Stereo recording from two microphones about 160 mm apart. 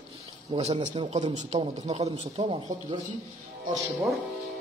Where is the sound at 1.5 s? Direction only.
30° right (ahead or behind).